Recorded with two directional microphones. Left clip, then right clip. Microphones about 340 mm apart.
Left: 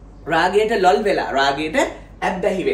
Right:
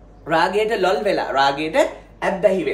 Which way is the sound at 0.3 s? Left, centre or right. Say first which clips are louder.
Left 1 dB; centre.